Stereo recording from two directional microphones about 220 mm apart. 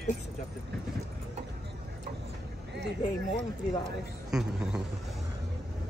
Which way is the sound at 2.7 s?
50° right (ahead or behind).